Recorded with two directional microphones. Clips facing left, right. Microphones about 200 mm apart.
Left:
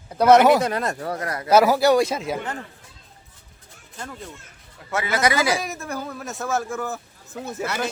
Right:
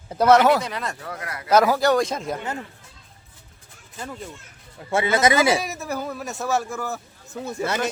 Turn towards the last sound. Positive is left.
turn(degrees=0)  # may be behind; listen again after turning